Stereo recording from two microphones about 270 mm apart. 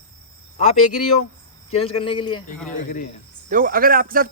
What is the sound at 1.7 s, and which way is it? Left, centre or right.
Speech, centre.